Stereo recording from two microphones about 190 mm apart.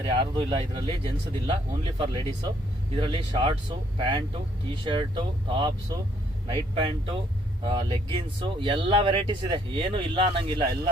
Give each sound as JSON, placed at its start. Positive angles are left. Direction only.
{"t": 0.1, "sound": "speech", "side_deg": -25}